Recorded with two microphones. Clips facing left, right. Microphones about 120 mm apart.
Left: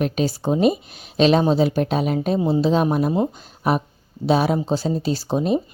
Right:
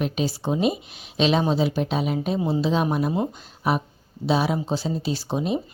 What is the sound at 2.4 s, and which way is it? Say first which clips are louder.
Speech: left 4 dB; 35° left (ahead or behind).